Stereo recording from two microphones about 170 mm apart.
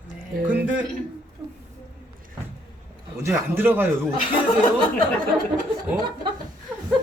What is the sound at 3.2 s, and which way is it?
Speech, 15° right (ahead or behind).